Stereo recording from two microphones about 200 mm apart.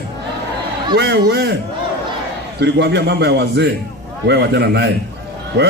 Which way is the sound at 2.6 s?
60° right (ahead or behind).